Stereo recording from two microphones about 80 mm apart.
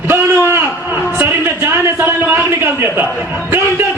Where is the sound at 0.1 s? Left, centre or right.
Right.